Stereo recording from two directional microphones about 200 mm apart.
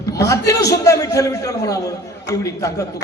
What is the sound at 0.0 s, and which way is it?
A man's voice, 15° left (ahead or behind).